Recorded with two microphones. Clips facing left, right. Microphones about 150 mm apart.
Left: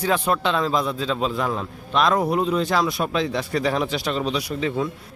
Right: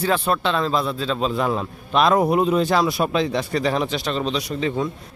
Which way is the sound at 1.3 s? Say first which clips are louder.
Right 3 dB; 5° right (ahead or behind).